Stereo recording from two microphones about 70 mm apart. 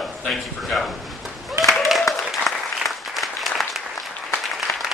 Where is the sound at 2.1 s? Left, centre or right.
Left.